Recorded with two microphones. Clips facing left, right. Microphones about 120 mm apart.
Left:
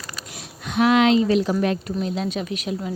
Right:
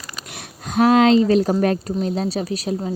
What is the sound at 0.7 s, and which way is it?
Speech, 40° right (ahead or behind).